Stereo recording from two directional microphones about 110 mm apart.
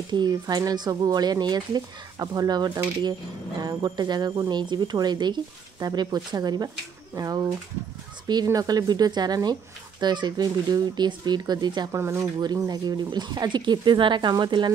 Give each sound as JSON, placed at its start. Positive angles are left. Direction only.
{"t": 0.1, "sound": "speech", "side_deg": -40}
{"t": 11.9, "sound": "speech", "side_deg": -25}
{"t": 12.4, "sound": "speech", "side_deg": -35}